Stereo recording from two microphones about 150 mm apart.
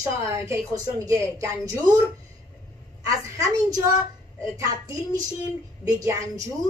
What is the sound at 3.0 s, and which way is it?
Speech, 20° right (ahead or behind).